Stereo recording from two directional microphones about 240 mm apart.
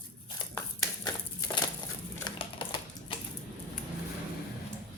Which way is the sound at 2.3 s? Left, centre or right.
Centre.